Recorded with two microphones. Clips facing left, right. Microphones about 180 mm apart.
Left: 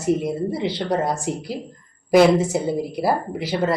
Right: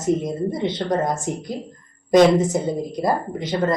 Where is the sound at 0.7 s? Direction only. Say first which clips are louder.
Even; 5° left (ahead or behind).